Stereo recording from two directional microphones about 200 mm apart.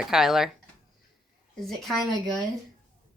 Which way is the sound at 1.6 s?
Centre (ahead or behind).